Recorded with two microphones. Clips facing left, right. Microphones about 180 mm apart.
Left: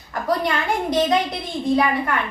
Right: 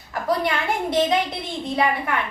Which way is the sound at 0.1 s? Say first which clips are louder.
Left 1 dB; 5° right (ahead or behind).